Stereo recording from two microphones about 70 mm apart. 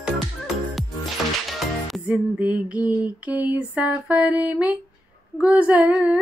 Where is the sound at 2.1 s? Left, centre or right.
Centre.